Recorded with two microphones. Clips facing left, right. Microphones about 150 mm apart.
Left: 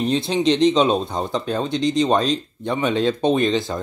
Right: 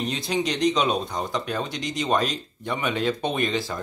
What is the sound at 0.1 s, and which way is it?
Speech, 25° left (ahead or behind).